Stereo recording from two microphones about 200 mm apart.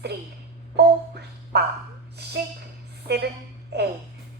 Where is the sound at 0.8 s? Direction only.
55° right (ahead or behind).